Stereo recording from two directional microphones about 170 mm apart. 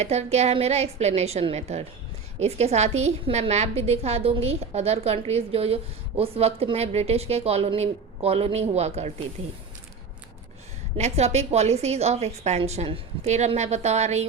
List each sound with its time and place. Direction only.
0.0 s a woman's voice: 40° right (ahead or behind)
10.9 s a woman's voice: 40° right (ahead or behind)